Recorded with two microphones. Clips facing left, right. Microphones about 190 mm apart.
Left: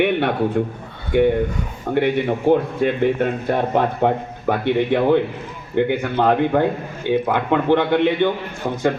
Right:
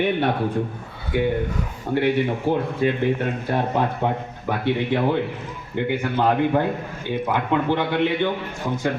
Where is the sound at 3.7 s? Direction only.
55° left (ahead or behind).